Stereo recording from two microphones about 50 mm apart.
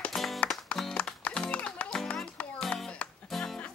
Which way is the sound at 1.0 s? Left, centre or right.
Left.